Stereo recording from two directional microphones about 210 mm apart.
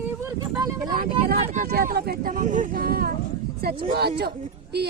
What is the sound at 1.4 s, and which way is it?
Speech, 40° right (ahead or behind).